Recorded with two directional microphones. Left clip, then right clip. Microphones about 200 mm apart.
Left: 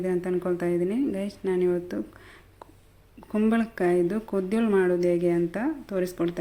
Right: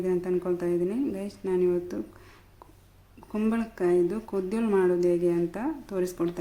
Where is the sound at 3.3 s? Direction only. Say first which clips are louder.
Left 4 dB; 15° left (ahead or behind).